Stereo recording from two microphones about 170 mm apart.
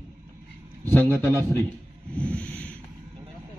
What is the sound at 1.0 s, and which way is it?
Speech, 10° left (ahead or behind).